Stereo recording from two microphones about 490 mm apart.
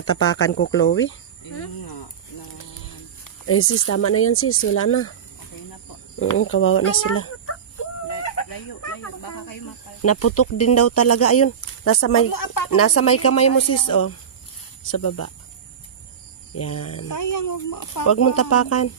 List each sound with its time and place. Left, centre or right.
0.0 s speech: left
3.4 s speech: left
6.3 s speech: left
8.1 s chicken: left
10.0 s speech: left
12.3 s speech: left
12.7 s speech: left
16.5 s speech: left